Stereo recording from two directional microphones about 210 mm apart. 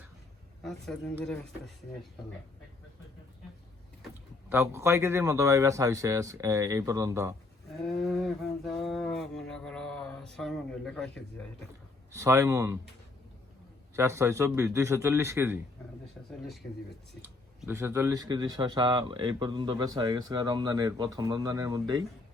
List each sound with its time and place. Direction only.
0.6 s speech: centre (ahead or behind)
4.4 s speech: 10° right (ahead or behind)
7.7 s a sound: centre (ahead or behind)
12.1 s speech: 15° right (ahead or behind)
13.9 s speech: 15° right (ahead or behind)
17.2 s speech: 10° right (ahead or behind)